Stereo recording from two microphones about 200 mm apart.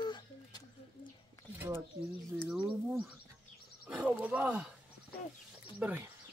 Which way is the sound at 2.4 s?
10° right (ahead or behind).